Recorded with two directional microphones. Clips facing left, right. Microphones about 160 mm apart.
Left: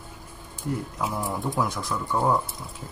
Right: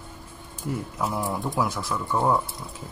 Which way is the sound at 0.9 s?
Centre (ahead or behind).